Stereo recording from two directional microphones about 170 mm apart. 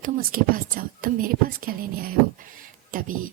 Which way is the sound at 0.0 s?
55° right (ahead or behind).